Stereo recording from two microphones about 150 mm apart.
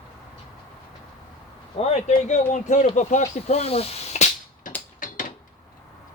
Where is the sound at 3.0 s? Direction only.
50° left (ahead or behind).